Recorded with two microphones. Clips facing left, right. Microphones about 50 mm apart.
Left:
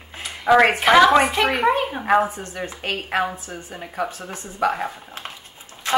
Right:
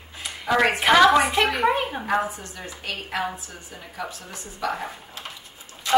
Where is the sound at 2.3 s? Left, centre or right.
Left.